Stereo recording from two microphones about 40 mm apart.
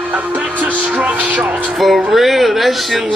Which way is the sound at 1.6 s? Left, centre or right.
Centre.